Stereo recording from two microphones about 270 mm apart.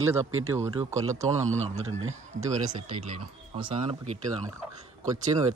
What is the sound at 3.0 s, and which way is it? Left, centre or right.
Speech, right.